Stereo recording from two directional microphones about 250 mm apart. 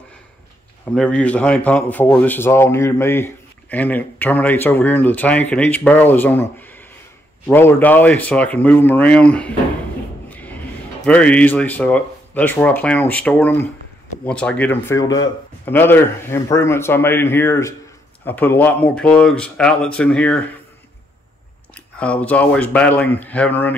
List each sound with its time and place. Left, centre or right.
0.8 s a man's voice: centre
10.3 s a sound: centre
11.1 s a man's voice: centre
21.7 s speech: centre